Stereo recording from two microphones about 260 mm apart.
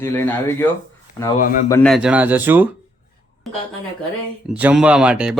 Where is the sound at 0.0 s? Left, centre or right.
Centre.